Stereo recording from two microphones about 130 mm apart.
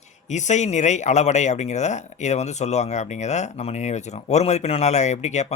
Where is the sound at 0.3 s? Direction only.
65° left (ahead or behind).